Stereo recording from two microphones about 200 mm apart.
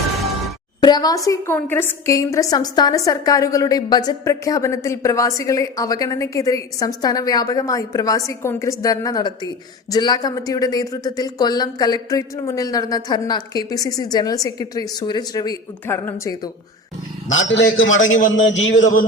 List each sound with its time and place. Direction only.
0.8 s a woman's voice: 20° left (ahead or behind)
17.2 s a man's voice: 70° left (ahead or behind)